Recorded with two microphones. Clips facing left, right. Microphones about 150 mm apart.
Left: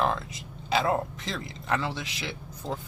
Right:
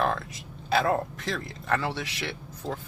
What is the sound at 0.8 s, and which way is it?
Speech, 20° left (ahead or behind).